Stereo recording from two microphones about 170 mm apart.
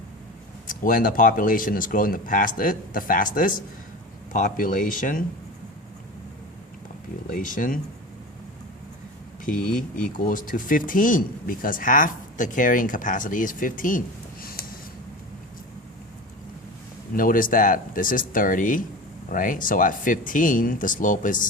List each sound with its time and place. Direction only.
0.7 s speech: 55° left (ahead or behind)
7.3 s speech: 55° left (ahead or behind)
9.5 s speech: 55° left (ahead or behind)
9.7 s speech: 5° left (ahead or behind)
10.2 s speech: 55° left (ahead or behind)
14.4 s a sound: 60° left (ahead or behind)
17.2 s speech: 55° left (ahead or behind)